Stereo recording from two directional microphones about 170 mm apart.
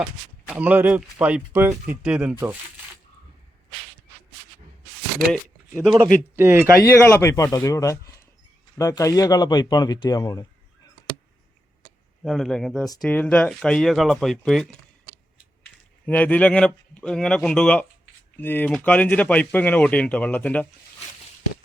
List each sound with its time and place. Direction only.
0.0 s speech: 5° right (ahead or behind)
5.3 s speech: centre (ahead or behind)
6.3 s speech: 15° right (ahead or behind)
6.8 s speech: 15° left (ahead or behind)
12.2 s speech: centre (ahead or behind)
16.0 s speech: 10° left (ahead or behind)